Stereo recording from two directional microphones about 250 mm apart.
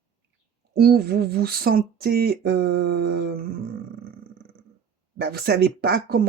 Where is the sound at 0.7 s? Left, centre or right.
Right.